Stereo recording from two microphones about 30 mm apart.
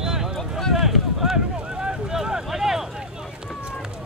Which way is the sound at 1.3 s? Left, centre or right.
Right.